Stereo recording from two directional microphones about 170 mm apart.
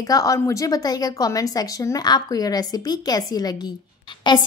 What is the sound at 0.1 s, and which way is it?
A woman's voice, 20° left (ahead or behind).